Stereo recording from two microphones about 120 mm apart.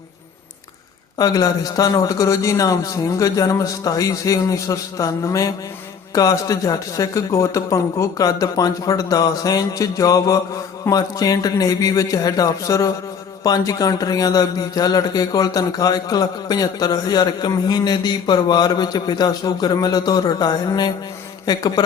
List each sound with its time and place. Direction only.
1.2 s a man's voice: 30° left (ahead or behind)